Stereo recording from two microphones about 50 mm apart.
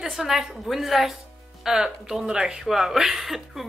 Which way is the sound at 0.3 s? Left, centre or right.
Centre.